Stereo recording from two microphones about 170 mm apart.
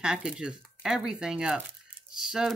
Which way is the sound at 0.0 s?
5° right (ahead or behind).